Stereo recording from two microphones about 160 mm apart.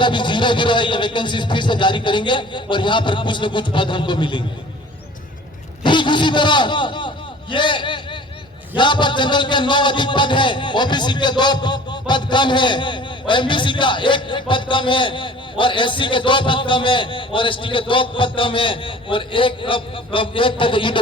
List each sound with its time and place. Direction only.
0.0 s speech: 30° left (ahead or behind)
5.8 s a sound: 30° left (ahead or behind)
7.5 s a man's voice: 30° left (ahead or behind)